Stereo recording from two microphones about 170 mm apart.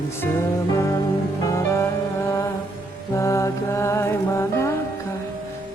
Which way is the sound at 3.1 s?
15° left (ahead or behind).